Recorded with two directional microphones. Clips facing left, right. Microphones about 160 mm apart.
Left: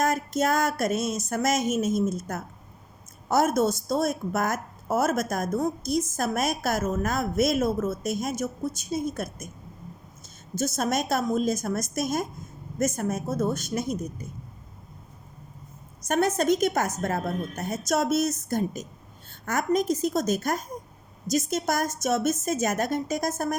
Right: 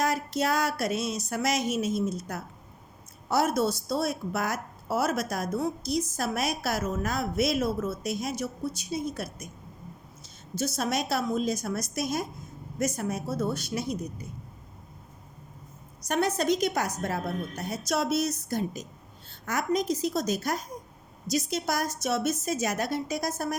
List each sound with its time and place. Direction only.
0.0 s a woman's voice: 50° left (ahead or behind)
16.0 s a woman's voice: 50° left (ahead or behind)